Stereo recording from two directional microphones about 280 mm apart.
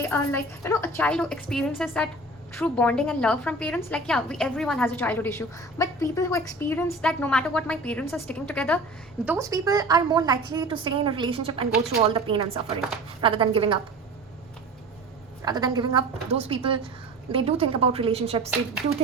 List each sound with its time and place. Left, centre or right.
0.0 s a woman's voice: centre
9.2 s a woman's voice: centre
15.4 s a woman's voice: centre